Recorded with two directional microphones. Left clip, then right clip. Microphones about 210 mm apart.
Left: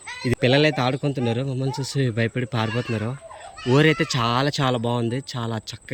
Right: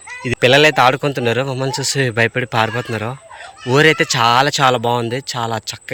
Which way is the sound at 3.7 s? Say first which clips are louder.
Right 7 dB; 10° left (ahead or behind).